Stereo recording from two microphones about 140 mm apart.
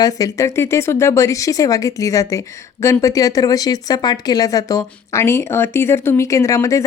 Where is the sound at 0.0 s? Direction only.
25° left (ahead or behind).